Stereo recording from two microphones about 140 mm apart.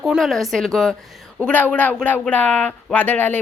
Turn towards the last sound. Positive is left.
turn(degrees=10)  # may be behind; listen again after turning